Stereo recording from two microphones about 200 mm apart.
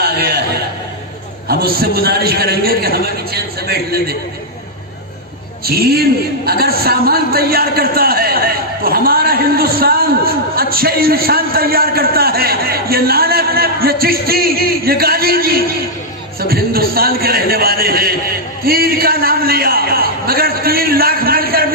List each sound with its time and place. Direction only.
0.0 s chuckle: 50° right (ahead or behind)
1.8 s a man's voice: 50° right (ahead or behind)
5.7 s a man's voice: 50° right (ahead or behind)